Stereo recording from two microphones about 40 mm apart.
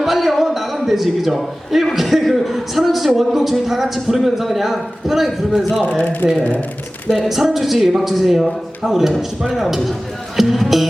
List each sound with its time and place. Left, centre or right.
0.0 s a man's voice: centre
6.0 s speech: left
7.3 s a man's voice: centre